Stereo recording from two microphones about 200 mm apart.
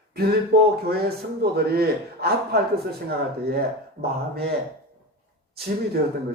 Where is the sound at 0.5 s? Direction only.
50° right (ahead or behind).